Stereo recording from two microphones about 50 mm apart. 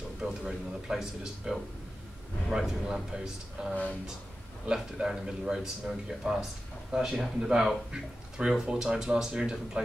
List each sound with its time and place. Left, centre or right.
0.2 s speech: centre
3.6 s speech: right
4.9 s speech: centre